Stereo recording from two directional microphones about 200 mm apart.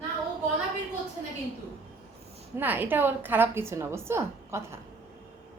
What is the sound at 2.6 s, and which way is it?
A woman's voice, 10° right (ahead or behind).